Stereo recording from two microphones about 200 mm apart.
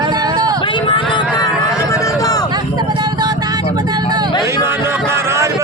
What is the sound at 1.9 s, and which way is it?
Run, 15° left (ahead or behind).